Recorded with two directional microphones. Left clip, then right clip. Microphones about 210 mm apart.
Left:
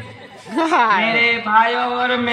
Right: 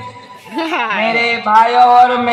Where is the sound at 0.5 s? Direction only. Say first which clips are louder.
Left 2 dB; 5° left (ahead or behind).